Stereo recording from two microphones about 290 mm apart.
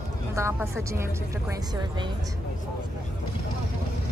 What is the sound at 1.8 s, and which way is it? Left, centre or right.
Speech, centre.